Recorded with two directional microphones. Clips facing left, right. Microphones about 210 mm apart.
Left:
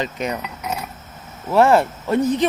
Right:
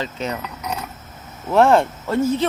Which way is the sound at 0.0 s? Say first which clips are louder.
Left 2 dB; 15° left (ahead or behind).